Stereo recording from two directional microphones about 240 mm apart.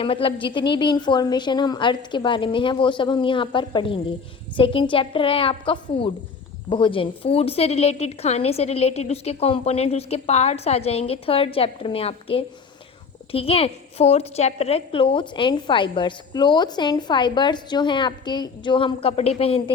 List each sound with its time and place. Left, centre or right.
0.0 s a woman's voice: left